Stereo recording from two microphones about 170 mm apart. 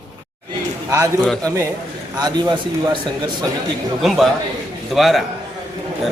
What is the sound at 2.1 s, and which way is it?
Speech, 25° right (ahead or behind).